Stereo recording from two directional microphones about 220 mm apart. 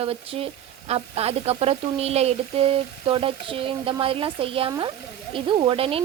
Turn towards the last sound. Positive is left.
turn(degrees=-25)  # may be behind; listen again after turning